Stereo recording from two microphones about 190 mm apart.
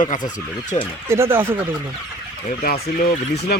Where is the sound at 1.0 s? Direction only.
15° right (ahead or behind).